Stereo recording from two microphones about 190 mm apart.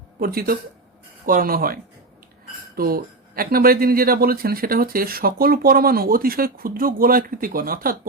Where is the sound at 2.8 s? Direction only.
50° right (ahead or behind).